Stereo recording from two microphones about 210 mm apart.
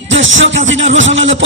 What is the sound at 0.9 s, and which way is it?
Music, 60° right (ahead or behind).